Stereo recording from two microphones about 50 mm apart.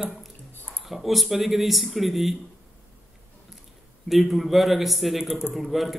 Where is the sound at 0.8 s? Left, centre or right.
Centre.